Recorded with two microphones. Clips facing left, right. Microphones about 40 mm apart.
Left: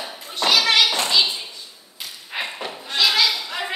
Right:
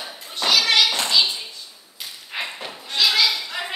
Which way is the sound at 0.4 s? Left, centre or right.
Centre.